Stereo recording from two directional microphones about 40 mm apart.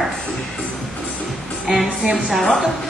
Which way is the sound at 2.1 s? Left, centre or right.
Centre.